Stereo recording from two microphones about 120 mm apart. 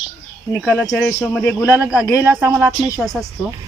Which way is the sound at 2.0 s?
25° left (ahead or behind).